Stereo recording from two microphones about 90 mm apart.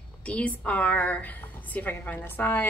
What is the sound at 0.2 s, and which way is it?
A woman's voice, 15° left (ahead or behind).